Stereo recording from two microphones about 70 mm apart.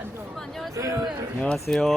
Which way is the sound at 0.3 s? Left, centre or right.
Centre.